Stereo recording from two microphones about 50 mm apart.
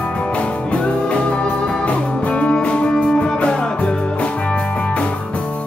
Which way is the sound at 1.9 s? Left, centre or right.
Left.